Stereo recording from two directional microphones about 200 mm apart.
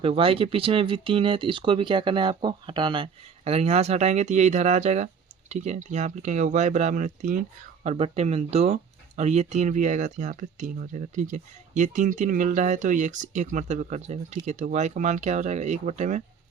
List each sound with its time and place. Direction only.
0.0 s speech: 30° right (ahead or behind)